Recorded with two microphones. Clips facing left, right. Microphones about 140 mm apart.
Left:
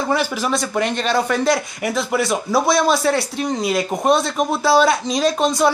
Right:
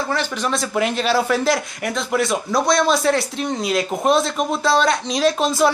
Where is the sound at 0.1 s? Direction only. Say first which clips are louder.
Left 3 dB; 10° left (ahead or behind).